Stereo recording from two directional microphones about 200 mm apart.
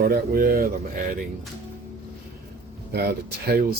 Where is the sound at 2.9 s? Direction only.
55° right (ahead or behind).